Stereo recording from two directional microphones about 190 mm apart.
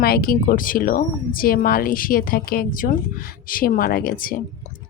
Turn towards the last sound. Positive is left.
turn(degrees=50)  # may be behind; listen again after turning